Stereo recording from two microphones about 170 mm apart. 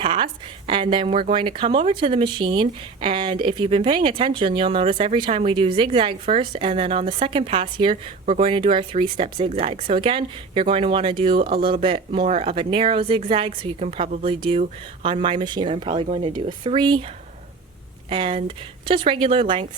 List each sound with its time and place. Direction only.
0.0 s a woman's voice: 30° right (ahead or behind)
18.1 s a woman's voice: 30° right (ahead or behind)